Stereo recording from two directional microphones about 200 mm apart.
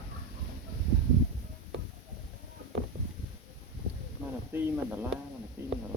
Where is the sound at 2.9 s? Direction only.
40° right (ahead or behind).